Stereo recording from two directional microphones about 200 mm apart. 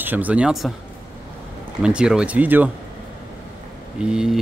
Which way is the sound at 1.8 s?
5° right (ahead or behind).